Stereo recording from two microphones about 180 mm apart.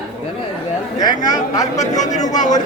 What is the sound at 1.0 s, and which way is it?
Speech, 20° left (ahead or behind).